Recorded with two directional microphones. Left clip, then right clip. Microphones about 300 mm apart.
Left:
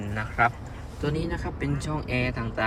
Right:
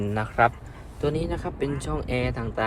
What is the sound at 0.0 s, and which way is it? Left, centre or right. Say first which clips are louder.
A man's voice: right 3 dB; centre.